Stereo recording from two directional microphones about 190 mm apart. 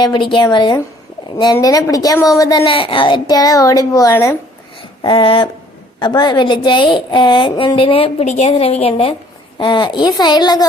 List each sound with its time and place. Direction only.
0.0 s a woman's voice: 25° left (ahead or behind)
5.0 s a woman's voice: 25° left (ahead or behind)